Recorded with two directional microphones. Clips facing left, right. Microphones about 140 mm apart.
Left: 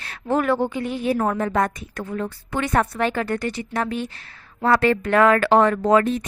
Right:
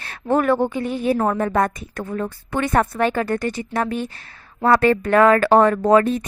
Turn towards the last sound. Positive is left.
turn(degrees=-40)  # may be behind; listen again after turning